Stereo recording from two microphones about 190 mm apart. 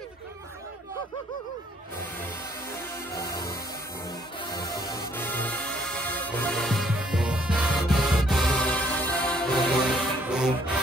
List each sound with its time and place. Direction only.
3.1 s music: 20° left (ahead or behind); by 10.5 s 5° right (ahead or behind)